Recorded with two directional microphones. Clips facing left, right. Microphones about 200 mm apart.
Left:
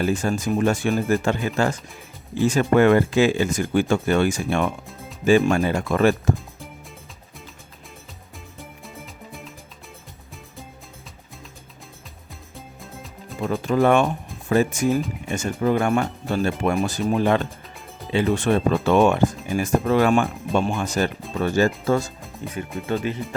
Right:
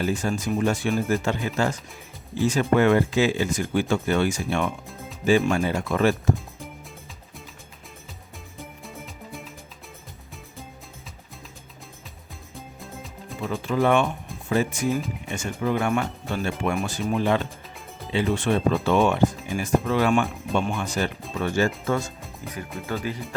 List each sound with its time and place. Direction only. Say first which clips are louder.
0.0 s speech: left 3 dB; 50° left (ahead or behind)
8.8 s music: even; centre (ahead or behind)
12.5 s music: right 1 dB; centre (ahead or behind)
13.4 s speech: left 4 dB; 45° left (ahead or behind)
22.9 s speech: left 5 dB; 25° left (ahead or behind)